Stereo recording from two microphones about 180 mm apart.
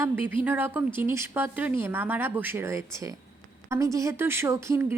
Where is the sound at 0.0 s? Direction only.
10° right (ahead or behind).